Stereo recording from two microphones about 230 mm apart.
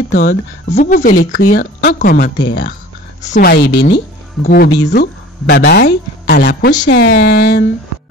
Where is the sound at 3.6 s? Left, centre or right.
Left.